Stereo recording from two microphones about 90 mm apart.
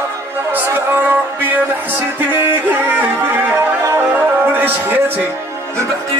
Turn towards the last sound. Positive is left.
turn(degrees=-20)  # may be behind; listen again after turning